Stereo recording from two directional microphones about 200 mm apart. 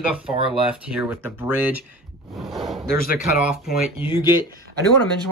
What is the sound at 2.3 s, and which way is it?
Speech, centre (ahead or behind).